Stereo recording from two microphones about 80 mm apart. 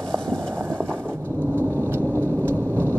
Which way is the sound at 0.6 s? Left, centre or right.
Right.